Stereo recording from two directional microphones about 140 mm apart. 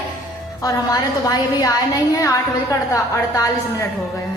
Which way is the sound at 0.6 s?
25° left (ahead or behind).